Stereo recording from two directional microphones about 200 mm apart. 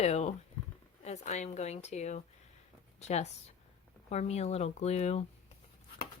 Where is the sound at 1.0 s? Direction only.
35° left (ahead or behind).